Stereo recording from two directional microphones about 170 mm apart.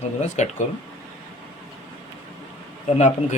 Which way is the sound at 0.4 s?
45° left (ahead or behind).